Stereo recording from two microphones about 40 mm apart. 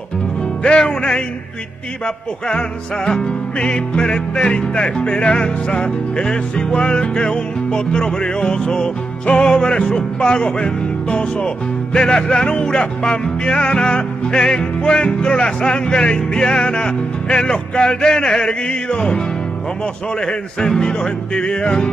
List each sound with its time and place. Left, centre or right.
0.7 s music: left
3.1 s music: left